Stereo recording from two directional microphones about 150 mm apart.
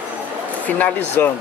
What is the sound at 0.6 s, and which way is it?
Speech, 10° left (ahead or behind).